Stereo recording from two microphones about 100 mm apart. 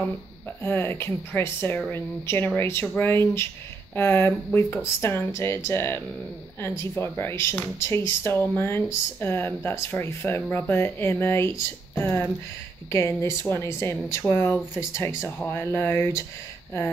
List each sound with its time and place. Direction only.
0.6 s speech: 25° left (ahead or behind)